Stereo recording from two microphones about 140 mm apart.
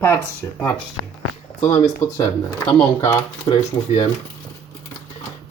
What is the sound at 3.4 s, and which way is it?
Speech, 40° left (ahead or behind).